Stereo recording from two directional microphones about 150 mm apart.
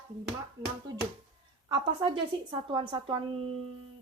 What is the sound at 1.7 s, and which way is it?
A woman's voice, 35° right (ahead or behind).